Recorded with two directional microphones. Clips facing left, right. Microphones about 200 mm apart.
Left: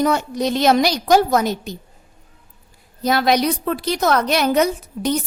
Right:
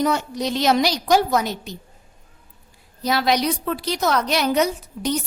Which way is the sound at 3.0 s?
50° left (ahead or behind).